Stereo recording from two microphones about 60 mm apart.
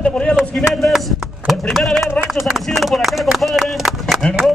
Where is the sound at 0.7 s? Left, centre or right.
Centre.